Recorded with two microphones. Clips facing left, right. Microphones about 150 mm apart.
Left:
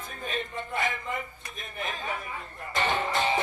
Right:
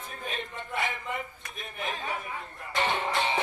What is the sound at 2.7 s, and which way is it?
Music, 40° left (ahead or behind).